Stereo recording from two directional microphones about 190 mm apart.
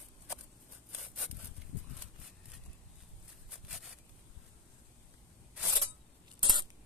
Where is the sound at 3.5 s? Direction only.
Centre (ahead or behind).